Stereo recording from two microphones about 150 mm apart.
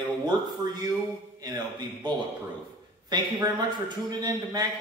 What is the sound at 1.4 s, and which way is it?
A man's voice, 30° right (ahead or behind).